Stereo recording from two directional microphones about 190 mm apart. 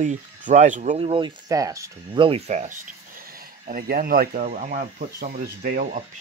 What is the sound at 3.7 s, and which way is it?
Speech, 50° right (ahead or behind).